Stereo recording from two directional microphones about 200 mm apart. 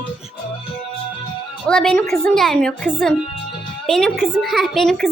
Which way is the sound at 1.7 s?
Centre (ahead or behind).